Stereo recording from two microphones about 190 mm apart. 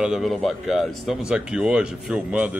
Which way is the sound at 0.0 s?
Centre (ahead or behind).